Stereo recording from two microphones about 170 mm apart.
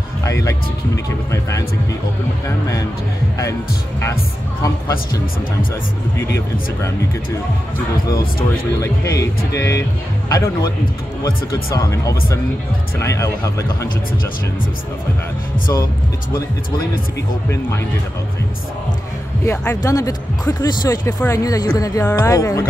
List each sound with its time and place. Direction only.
0.2 s speech: 20° left (ahead or behind)
8.8 s speech: 20° left (ahead or behind)
19.4 s speech: 10° left (ahead or behind)